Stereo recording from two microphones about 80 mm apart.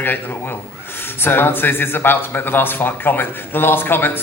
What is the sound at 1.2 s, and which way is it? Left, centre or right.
Speech, left.